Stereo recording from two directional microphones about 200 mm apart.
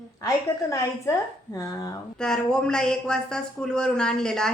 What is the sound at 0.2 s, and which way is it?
A woman's voice, 15° left (ahead or behind).